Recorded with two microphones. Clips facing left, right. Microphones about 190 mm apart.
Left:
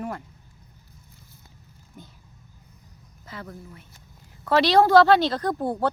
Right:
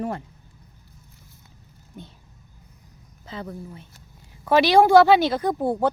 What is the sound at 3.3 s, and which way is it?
Speech, 25° right (ahead or behind).